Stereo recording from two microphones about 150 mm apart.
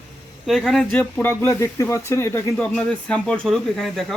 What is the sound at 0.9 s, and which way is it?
Speech, 10° left (ahead or behind).